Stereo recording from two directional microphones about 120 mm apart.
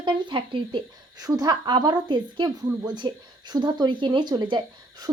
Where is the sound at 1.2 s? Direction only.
30° right (ahead or behind).